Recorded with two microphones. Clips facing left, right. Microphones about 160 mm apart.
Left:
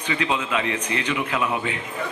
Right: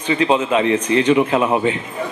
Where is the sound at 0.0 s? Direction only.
30° right (ahead or behind).